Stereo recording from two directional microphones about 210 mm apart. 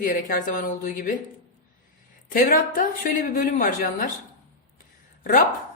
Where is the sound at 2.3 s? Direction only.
40° left (ahead or behind).